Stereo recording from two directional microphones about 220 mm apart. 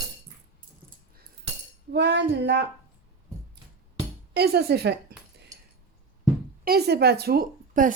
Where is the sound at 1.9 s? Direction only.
50° right (ahead or behind).